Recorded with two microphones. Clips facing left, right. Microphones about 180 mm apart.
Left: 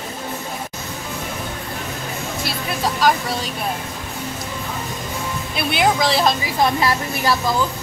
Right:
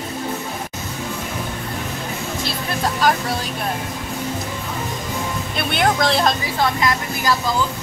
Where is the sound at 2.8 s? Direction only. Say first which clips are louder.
Left 1 dB; centre (ahead or behind).